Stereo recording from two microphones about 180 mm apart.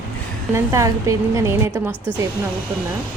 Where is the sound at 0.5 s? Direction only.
15° right (ahead or behind).